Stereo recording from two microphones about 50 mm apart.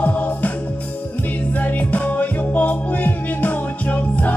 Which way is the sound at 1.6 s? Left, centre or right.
Left.